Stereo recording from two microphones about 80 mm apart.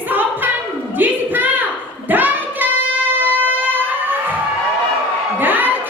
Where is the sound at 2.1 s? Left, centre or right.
Right.